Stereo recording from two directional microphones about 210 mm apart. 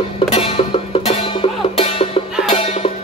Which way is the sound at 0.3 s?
25° left (ahead or behind).